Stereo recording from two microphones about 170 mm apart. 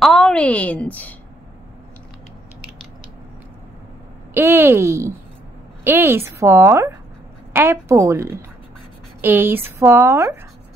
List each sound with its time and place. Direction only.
0.0 s a woman's voice: centre (ahead or behind)
4.3 s speech: 15° right (ahead or behind)